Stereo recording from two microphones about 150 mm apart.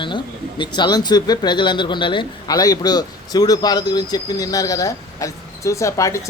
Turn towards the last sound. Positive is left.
turn(degrees=20)  # may be behind; listen again after turning